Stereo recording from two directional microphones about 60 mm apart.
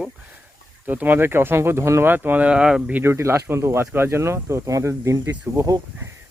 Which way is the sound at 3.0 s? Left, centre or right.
Right.